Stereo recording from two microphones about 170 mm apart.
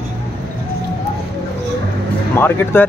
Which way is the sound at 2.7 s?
15° left (ahead or behind).